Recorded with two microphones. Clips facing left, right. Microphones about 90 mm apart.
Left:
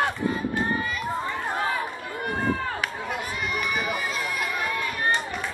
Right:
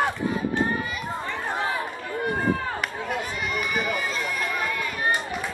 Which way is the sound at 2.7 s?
Centre (ahead or behind).